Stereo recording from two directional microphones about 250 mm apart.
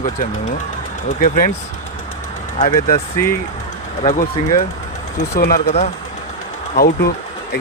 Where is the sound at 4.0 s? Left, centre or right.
Left.